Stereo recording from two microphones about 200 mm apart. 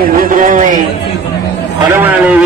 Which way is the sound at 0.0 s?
45° right (ahead or behind).